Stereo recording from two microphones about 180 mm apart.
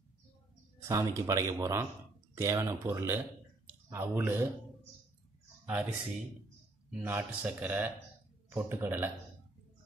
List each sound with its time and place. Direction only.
0.8 s speech: 15° right (ahead or behind)
5.7 s speech: 5° right (ahead or behind)